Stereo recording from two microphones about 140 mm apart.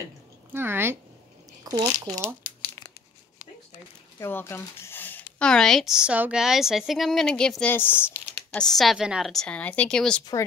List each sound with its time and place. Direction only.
0.5 s a woman's voice: 15° right (ahead or behind)
1.6 s speech: 30° right (ahead or behind)
2.2 s crumpling: 15° left (ahead or behind)
4.2 s speech: 15° left (ahead or behind)
8.5 s speech: centre (ahead or behind)